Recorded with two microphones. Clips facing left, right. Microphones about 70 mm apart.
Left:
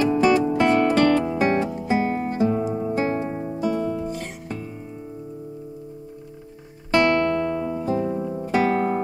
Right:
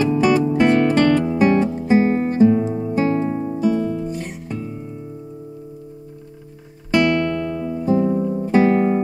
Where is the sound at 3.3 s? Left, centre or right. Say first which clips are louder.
Right 5 dB; left.